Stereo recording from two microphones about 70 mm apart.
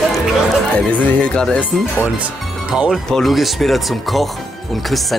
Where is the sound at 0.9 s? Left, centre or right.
Left.